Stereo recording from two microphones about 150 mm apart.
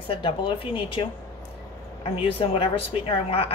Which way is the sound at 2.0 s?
40° left (ahead or behind).